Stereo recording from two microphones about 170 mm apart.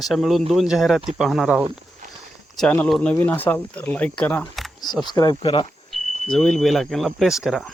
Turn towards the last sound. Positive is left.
turn(degrees=0)  # may be behind; listen again after turning